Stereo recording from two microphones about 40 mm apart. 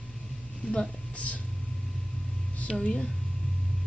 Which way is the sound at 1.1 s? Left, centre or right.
Left.